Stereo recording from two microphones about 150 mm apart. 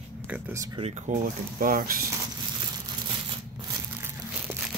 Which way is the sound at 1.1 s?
60° right (ahead or behind).